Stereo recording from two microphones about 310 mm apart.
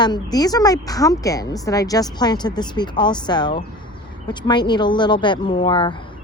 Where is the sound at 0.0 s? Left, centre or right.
Centre.